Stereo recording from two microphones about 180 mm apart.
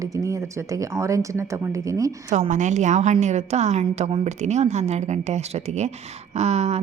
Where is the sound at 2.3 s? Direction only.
40° right (ahead or behind).